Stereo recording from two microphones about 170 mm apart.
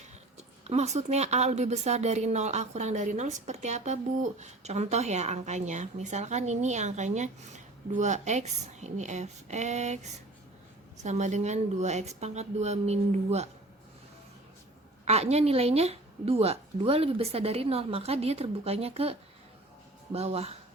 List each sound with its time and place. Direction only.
0.3 s a woman's voice: 40° right (ahead or behind)
15.0 s a woman's voice: 40° right (ahead or behind)
20.1 s a woman's voice: 35° right (ahead or behind)